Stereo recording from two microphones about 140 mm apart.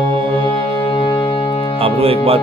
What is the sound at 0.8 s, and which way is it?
Music, 35° left (ahead or behind).